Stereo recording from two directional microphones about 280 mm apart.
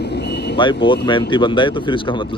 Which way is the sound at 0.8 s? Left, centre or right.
Centre.